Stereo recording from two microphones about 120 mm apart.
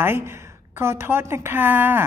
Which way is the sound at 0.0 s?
20° right (ahead or behind).